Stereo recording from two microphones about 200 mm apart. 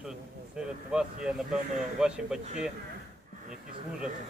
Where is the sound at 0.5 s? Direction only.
5° right (ahead or behind).